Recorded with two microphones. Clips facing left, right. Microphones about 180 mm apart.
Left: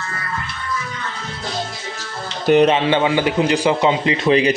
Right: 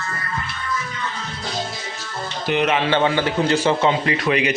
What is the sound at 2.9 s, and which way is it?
Speech, 15° left (ahead or behind).